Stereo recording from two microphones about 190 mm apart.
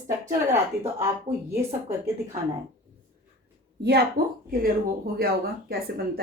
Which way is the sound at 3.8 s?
60° right (ahead or behind).